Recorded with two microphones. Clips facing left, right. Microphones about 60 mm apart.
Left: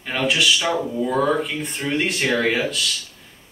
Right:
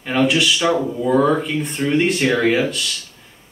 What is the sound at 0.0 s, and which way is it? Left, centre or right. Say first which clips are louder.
Speech: right 4 dB; centre.